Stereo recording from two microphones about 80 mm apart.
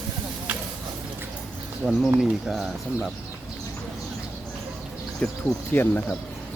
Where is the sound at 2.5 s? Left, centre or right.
Centre.